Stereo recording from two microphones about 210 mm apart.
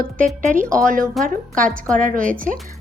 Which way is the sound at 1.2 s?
Centre (ahead or behind).